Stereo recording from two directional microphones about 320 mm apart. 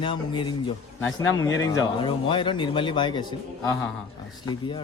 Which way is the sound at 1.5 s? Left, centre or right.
Left.